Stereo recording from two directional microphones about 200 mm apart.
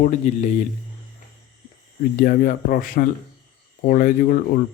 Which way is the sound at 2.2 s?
45° left (ahead or behind).